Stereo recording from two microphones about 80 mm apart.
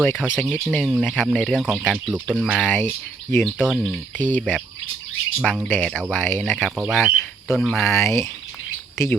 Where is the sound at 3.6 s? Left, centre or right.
Centre.